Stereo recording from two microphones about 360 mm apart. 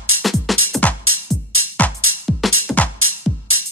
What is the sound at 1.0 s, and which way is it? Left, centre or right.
Music, right.